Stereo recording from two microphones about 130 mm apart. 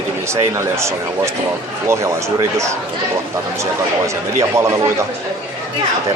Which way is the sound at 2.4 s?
20° right (ahead or behind).